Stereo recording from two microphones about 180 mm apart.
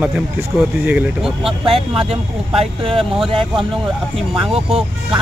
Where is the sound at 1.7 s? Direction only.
35° right (ahead or behind).